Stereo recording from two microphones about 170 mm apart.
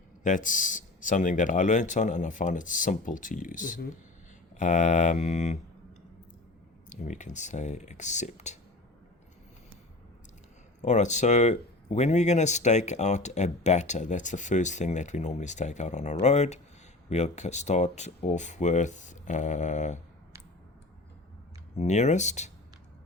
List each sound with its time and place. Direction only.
0.2 s speech: 50° left (ahead or behind)
6.9 s speech: 45° left (ahead or behind)
10.8 s speech: 45° left (ahead or behind)
21.8 s speech: 40° left (ahead or behind)